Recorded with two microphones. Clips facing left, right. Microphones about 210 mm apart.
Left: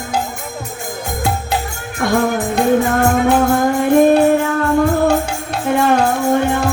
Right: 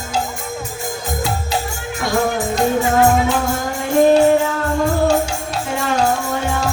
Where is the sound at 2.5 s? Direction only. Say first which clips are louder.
Left 2 dB; 55° left (ahead or behind).